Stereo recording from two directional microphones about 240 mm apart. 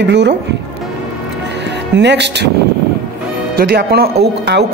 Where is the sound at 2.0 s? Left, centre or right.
Right.